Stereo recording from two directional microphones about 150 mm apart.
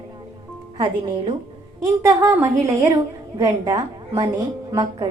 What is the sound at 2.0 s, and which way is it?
A woman's voice, 20° right (ahead or behind).